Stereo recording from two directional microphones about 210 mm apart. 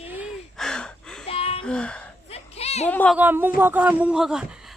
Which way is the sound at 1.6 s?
5° left (ahead or behind).